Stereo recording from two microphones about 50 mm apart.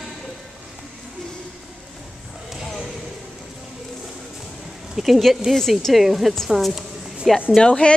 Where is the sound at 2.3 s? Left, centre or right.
Centre.